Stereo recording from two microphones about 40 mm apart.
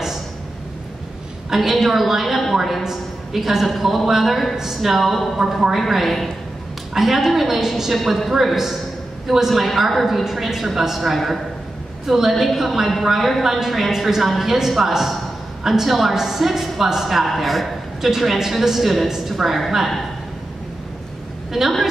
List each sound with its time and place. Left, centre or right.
1.5 s a woman's voice: centre
8.0 s a woman's voice: centre
8.3 s a man's voice: centre
21.5 s a man's voice: centre